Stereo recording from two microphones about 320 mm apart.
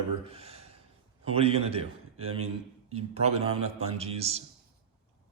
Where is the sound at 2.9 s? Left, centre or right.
Centre.